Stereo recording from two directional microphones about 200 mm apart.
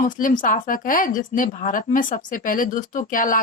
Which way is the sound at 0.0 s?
40° left (ahead or behind).